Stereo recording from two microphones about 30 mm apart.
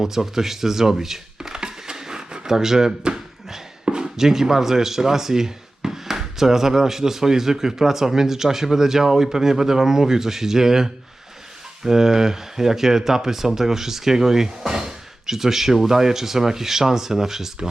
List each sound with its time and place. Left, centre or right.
0.0 s speech: centre
1.5 s a sound: right
2.5 s speech: centre